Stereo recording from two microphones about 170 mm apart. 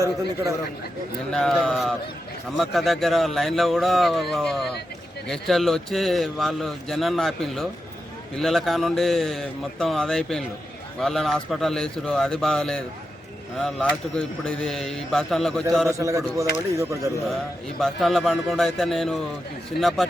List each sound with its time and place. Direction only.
1.3 s a man's voice: 5° left (ahead or behind)
16.0 s speech: 20° right (ahead or behind)
17.7 s a man's voice: centre (ahead or behind)